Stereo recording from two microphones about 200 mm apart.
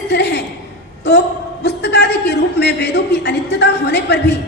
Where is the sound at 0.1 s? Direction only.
55° left (ahead or behind).